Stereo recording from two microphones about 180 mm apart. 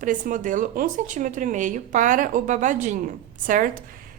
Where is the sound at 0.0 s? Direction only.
50° right (ahead or behind).